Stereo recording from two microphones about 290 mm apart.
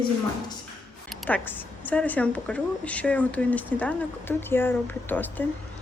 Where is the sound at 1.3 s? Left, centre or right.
Centre.